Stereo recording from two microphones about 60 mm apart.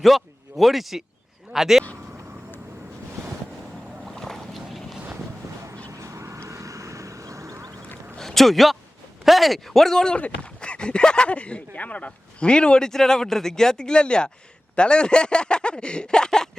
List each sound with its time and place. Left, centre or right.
0.0 s speech: centre
4.0 s boat: centre
5.9 s vehicle: right
8.2 s a man's voice: centre
10.2 s speech: left